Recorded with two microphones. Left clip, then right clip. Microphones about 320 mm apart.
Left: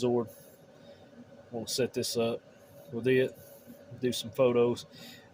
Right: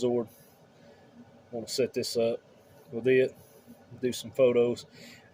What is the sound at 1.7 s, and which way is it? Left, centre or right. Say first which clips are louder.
Speech: right 2 dB; centre.